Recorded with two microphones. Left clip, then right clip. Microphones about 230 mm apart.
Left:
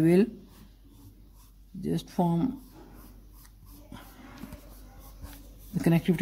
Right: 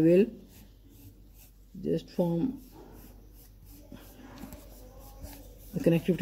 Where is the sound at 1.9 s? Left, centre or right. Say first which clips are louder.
Even; left.